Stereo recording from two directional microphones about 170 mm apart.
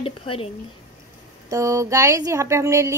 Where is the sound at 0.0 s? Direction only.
35° left (ahead or behind).